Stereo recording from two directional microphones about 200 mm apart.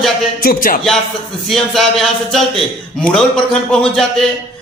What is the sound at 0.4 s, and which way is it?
Speech, 45° left (ahead or behind).